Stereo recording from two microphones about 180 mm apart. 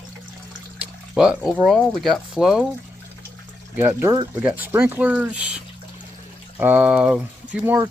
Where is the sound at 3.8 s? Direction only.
15° right (ahead or behind).